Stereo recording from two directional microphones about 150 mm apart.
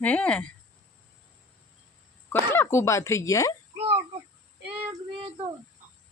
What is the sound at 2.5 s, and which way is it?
Speech, 15° left (ahead or behind).